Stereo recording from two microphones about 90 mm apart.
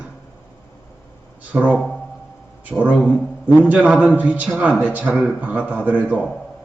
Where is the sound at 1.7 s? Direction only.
10° left (ahead or behind).